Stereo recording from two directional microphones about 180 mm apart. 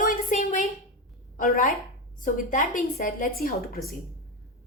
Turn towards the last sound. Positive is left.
turn(degrees=55)  # may be behind; listen again after turning